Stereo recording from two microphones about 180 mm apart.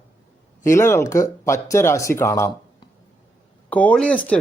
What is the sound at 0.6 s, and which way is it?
Speech, 15° left (ahead or behind).